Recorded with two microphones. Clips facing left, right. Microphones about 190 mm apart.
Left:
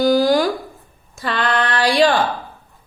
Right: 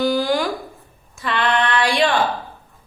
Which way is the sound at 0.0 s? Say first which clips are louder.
Left 4 dB; 40° left (ahead or behind).